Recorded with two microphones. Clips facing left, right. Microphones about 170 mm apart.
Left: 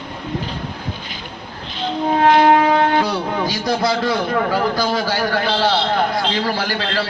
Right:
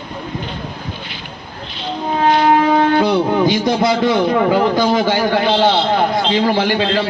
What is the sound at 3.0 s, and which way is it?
A man's voice, 25° right (ahead or behind).